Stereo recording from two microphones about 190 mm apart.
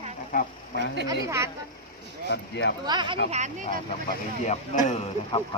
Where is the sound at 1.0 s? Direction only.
15° right (ahead or behind).